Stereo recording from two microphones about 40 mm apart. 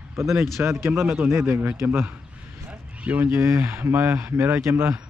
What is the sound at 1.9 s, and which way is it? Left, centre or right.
A man's voice, right.